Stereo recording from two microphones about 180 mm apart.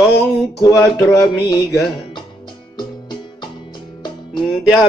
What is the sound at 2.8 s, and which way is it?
Music, 25° left (ahead or behind).